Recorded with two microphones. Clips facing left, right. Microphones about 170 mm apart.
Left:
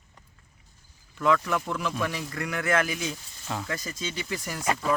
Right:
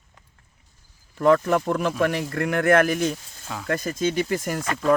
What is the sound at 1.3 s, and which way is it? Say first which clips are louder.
Speech: right 7 dB; 45° right (ahead or behind).